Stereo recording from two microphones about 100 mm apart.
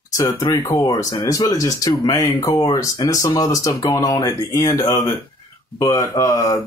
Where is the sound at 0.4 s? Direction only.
35° left (ahead or behind).